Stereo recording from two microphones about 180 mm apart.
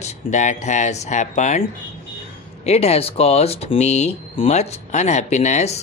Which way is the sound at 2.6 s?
35° left (ahead or behind).